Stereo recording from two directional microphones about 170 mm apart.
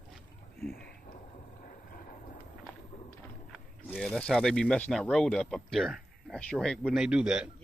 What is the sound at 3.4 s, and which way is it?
Speech, 5° left (ahead or behind).